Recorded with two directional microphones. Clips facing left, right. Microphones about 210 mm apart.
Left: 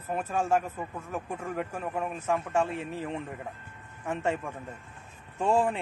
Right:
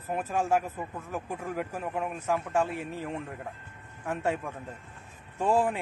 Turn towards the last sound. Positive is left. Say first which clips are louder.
# even
turn(degrees=-10)  # may be behind; listen again after turning